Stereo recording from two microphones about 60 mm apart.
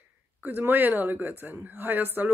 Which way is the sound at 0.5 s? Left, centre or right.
Right.